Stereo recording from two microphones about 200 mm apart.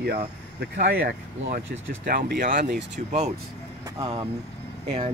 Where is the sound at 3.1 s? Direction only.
35° right (ahead or behind).